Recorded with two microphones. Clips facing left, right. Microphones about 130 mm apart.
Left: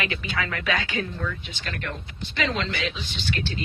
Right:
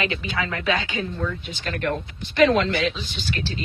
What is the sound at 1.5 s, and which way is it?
Speech, 45° right (ahead or behind).